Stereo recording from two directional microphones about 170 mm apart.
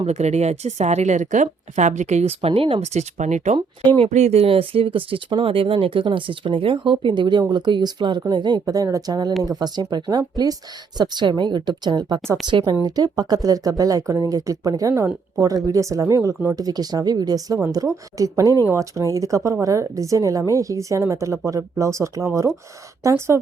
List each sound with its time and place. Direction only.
0.0 s speech: 40° right (ahead or behind); by 23.4 s 15° right (ahead or behind)